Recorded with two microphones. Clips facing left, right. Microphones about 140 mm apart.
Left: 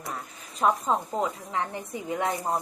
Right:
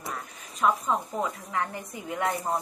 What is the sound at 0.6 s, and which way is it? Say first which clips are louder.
A woman's voice: left 1 dB; 30° left (ahead or behind).